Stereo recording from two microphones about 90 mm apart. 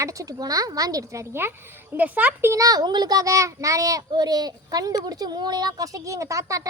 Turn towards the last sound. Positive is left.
turn(degrees=-35)  # may be behind; listen again after turning